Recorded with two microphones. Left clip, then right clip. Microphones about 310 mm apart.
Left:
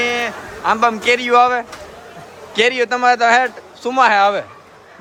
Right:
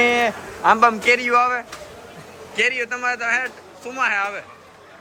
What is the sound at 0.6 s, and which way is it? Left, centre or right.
Speech, centre.